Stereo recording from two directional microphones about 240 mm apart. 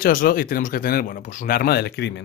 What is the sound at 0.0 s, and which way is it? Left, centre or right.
Speech, left.